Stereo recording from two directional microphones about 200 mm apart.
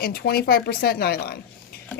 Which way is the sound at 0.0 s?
50° left (ahead or behind).